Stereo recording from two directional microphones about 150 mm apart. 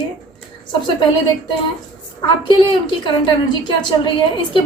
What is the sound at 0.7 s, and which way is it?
Speech, 30° left (ahead or behind).